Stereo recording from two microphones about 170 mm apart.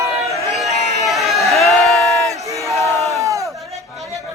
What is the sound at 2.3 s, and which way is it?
Battle cry, 20° right (ahead or behind).